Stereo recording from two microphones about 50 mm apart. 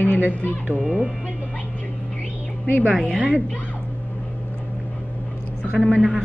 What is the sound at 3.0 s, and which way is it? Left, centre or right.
Speech, centre.